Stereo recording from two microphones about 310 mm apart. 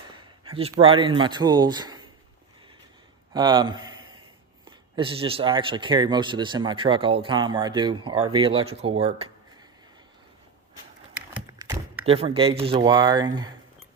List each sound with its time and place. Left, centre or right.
0.4 s speech: centre
3.3 s a man's voice: centre
11.3 s tap: centre
12.0 s speech: centre